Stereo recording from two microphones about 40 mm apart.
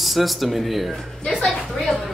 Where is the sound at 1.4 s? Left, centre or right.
Centre.